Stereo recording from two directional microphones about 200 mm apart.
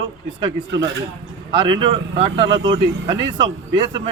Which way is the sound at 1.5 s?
25° right (ahead or behind).